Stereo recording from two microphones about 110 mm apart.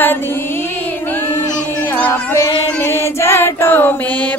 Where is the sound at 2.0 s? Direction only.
25° left (ahead or behind).